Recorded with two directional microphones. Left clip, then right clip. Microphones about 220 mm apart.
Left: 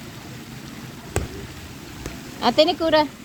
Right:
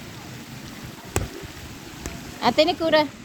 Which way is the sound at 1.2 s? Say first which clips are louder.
Even; 45° right (ahead or behind).